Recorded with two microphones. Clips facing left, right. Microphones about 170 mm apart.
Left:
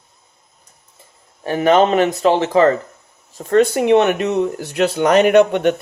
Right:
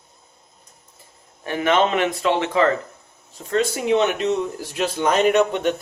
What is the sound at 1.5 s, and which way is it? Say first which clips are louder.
A man's voice: left 6 dB; 40° left (ahead or behind).